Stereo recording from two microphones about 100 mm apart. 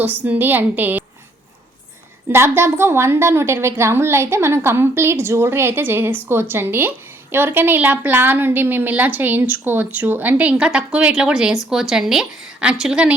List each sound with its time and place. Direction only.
0.0 s a woman's voice: 15° right (ahead or behind)
2.3 s a woman's voice: 25° right (ahead or behind); by 13.1 s 10° right (ahead or behind)